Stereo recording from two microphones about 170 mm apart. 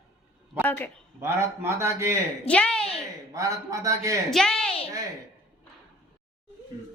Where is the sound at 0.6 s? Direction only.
10° left (ahead or behind).